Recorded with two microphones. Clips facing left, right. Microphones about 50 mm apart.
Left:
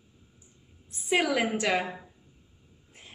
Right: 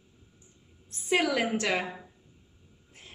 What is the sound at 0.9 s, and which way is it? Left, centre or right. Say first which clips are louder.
A woman's voice: even; centre.